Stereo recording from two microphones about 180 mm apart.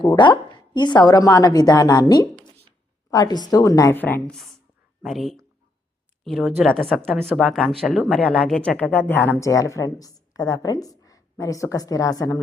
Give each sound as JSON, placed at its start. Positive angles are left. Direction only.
{"t": 0.0, "sound": "a woman's voice", "side_deg": 25}